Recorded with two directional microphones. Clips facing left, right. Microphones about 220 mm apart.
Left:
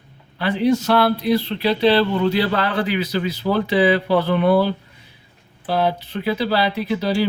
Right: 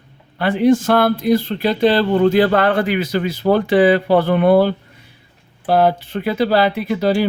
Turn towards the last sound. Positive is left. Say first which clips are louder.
# right 3 dB
turn(degrees=-50)  # may be behind; listen again after turning